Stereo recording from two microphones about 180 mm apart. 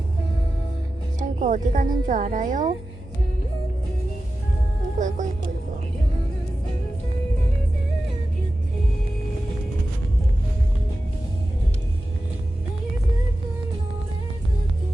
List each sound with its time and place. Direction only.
1.2 s a woman's voice: 45° right (ahead or behind)
4.9 s speech: 45° right (ahead or behind)